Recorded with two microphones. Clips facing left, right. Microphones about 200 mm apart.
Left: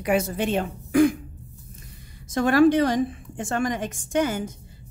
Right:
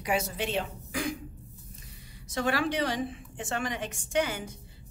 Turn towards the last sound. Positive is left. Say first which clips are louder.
# left 6 dB
turn(degrees=45)  # may be behind; listen again after turning